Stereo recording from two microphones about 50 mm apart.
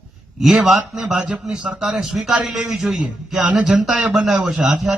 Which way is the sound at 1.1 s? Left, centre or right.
Right.